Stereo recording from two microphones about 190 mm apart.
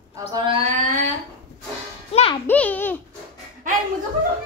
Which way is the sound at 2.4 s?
10° left (ahead or behind).